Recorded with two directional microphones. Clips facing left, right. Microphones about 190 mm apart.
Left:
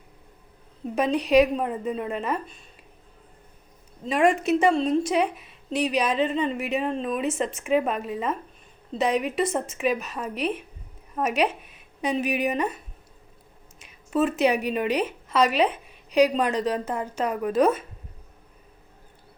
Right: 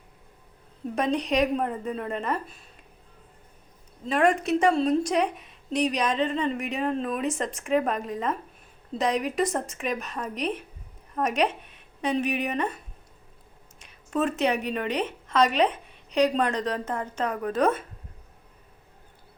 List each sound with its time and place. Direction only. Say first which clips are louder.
0.9 s a woman's voice: left 5 dB; 5° left (ahead or behind)
4.0 s a woman's voice: left 2 dB; 10° left (ahead or behind)
13.7 s a woman's voice: left 3 dB; 5° left (ahead or behind)